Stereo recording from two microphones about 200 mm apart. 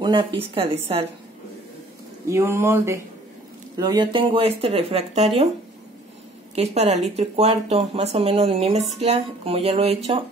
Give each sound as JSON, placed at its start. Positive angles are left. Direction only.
{"t": 0.0, "sound": "speech", "side_deg": -25}
{"t": 2.2, "sound": "speech", "side_deg": -15}
{"t": 6.5, "sound": "speech", "side_deg": -30}